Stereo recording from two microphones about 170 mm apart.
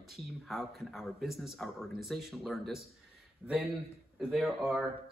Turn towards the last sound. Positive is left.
turn(degrees=0)  # may be behind; listen again after turning